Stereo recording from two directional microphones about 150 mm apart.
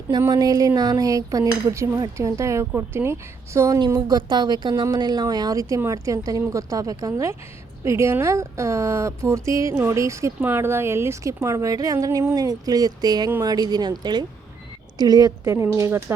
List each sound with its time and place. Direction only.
0.1 s a woman's voice: 25° right (ahead or behind)